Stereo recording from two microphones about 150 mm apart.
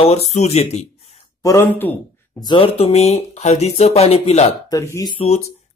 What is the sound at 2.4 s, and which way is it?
Speech, 35° left (ahead or behind).